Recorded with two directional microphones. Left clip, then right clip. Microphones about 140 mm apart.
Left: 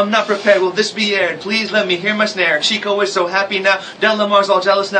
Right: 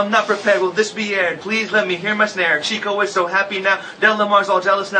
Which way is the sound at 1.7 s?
25° left (ahead or behind).